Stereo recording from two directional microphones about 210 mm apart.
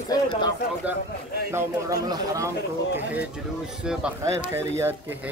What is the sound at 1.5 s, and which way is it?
Speech, 15° right (ahead or behind).